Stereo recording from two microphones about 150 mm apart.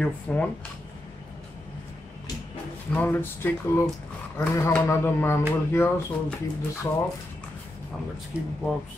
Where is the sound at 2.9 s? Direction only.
10° left (ahead or behind).